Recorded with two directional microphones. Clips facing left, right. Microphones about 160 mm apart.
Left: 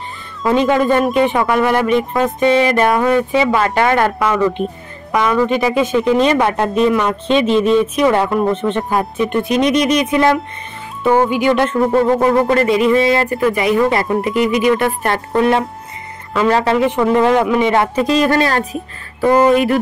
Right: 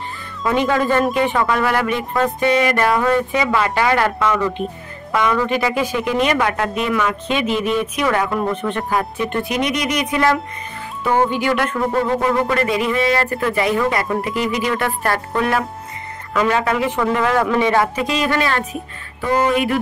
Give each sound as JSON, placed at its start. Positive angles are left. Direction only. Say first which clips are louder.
{"t": 0.4, "sound": "speech", "louder": "left 4 dB", "side_deg": 20}
{"t": 17.9, "sound": "speech", "louder": "left 6 dB", "side_deg": 40}